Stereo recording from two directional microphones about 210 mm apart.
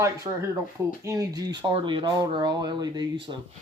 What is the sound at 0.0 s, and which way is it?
Speech, 15° right (ahead or behind).